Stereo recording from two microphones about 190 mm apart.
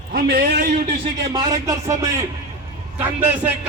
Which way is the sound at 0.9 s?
25° right (ahead or behind).